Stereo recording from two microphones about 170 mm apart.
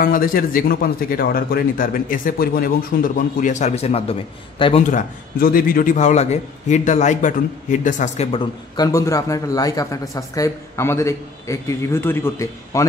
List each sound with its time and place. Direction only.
0.0 s speech: 55° left (ahead or behind); by 4.8 s 35° left (ahead or behind)
4.9 s a man's voice: 55° left (ahead or behind)
8.3 s a man's voice: 25° left (ahead or behind)